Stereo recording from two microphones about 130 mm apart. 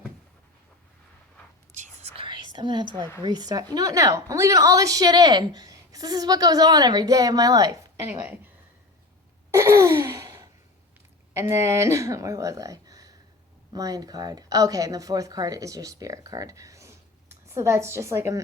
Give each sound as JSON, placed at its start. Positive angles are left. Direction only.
{"t": 1.7, "sound": "whispering", "side_deg": -65}
{"t": 2.2, "sound": "whispering", "side_deg": -35}
{"t": 3.2, "sound": "a woman's voice", "side_deg": -30}
{"t": 9.5, "sound": "a sound", "side_deg": -20}
{"t": 11.3, "sound": "a woman's voice", "side_deg": -20}